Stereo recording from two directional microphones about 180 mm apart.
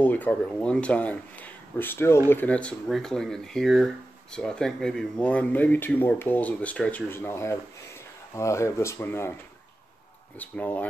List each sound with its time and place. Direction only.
0.0 s speech: 10° left (ahead or behind)
10.4 s speech: 10° left (ahead or behind)